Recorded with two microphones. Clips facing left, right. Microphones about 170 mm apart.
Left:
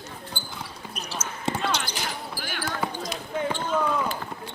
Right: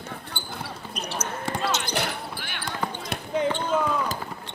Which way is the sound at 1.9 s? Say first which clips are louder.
Right 3 dB; 65° right (ahead or behind).